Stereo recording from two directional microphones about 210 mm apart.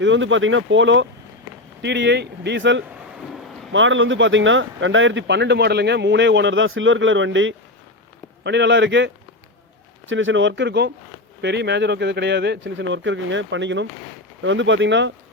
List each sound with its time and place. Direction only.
0.0 s speech: 60° right (ahead or behind)
2.8 s a sound: 5° right (ahead or behind)
3.7 s speech: 65° right (ahead or behind)